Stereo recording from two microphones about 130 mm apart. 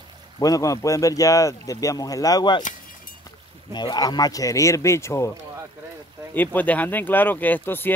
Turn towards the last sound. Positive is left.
turn(degrees=15)  # may be behind; listen again after turning